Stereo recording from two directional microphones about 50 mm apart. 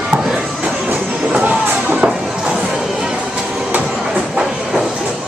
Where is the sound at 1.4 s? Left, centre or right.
Right.